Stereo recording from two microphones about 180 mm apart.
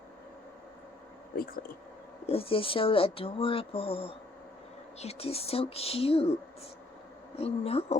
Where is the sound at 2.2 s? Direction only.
30° left (ahead or behind).